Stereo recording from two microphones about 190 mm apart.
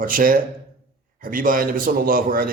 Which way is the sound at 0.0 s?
45° right (ahead or behind).